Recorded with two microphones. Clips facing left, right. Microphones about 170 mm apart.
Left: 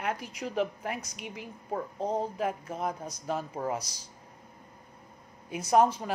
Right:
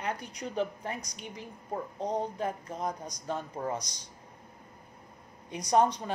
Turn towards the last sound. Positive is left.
turn(degrees=5)  # may be behind; listen again after turning